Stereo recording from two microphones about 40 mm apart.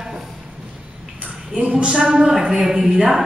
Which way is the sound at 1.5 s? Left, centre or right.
Right.